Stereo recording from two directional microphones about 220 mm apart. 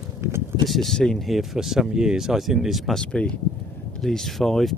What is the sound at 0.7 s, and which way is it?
Speech, centre (ahead or behind).